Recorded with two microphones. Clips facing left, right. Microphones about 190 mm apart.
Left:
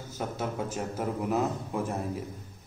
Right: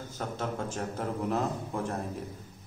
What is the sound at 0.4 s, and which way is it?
A man's voice, 10° left (ahead or behind).